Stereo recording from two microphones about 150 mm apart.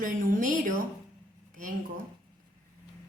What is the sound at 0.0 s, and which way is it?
Speech, 65° right (ahead or behind).